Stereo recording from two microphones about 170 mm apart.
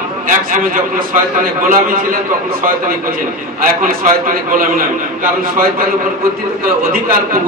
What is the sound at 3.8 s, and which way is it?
A man's voice, 55° right (ahead or behind).